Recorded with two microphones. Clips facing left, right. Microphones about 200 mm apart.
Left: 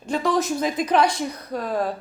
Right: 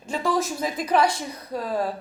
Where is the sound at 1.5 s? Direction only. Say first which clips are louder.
Even; 30° right (ahead or behind).